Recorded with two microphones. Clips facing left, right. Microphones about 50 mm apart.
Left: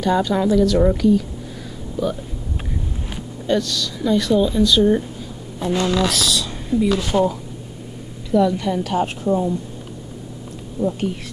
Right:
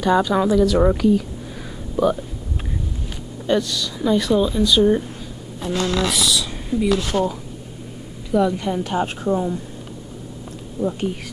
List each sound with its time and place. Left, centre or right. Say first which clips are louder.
0.0 s speech: right 1 dB; centre
3.4 s speech: even; centre
5.7 s speech: left 2 dB; centre
6.0 s speech: even; centre
8.3 s speech: left 2 dB; centre
10.8 s speech: left 1 dB; centre